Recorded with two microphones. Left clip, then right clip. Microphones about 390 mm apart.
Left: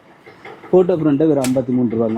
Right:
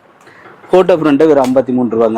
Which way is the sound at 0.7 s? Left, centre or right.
Centre.